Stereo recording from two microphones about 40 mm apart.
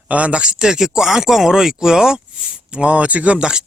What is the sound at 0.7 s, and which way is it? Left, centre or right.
Speech, centre.